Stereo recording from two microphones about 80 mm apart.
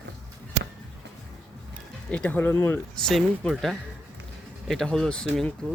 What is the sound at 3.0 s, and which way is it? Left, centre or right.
Speech, centre.